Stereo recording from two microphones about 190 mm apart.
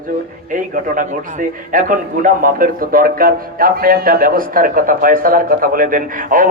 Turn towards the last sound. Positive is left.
turn(degrees=-45)  # may be behind; listen again after turning